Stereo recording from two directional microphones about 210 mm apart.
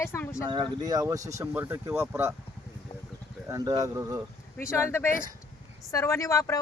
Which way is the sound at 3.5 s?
15° right (ahead or behind).